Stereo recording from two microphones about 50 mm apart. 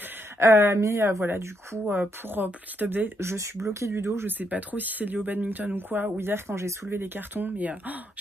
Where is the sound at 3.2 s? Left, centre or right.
Right.